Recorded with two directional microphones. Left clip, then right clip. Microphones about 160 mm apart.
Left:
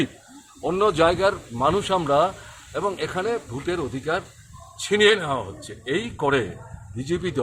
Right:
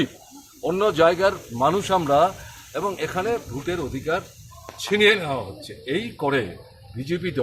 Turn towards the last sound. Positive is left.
turn(degrees=15)  # may be behind; listen again after turning